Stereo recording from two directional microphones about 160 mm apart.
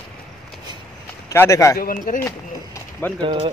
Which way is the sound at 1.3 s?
15° left (ahead or behind).